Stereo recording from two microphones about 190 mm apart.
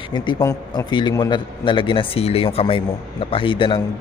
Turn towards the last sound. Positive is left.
turn(degrees=25)  # may be behind; listen again after turning